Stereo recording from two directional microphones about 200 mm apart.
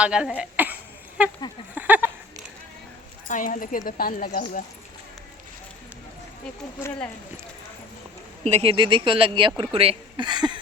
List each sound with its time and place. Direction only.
0.0 s speech: 5° right (ahead or behind)
1.7 s a sound: 10° right (ahead or behind)
3.2 s speech: 40° left (ahead or behind)
8.4 s speech: 30° right (ahead or behind)